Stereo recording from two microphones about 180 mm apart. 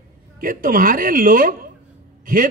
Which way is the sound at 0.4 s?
50° right (ahead or behind).